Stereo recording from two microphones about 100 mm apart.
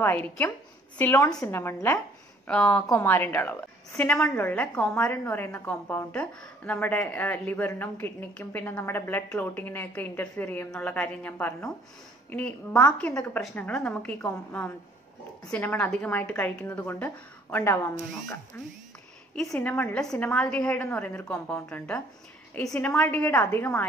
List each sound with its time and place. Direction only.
0.0 s speech: 20° left (ahead or behind)
2.4 s a woman's voice: 10° left (ahead or behind)
2.9 s a woman's voice: 25° left (ahead or behind)
19.6 s a woman's voice: 20° left (ahead or behind)
20.0 s a woman's voice: 5° left (ahead or behind)